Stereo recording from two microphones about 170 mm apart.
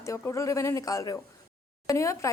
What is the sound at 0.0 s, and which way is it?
Speech, 15° left (ahead or behind).